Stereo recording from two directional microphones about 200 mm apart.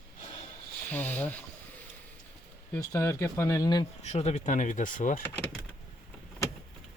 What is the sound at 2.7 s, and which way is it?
Speech, 15° left (ahead or behind).